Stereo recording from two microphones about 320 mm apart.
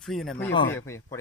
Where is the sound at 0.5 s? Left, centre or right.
Left.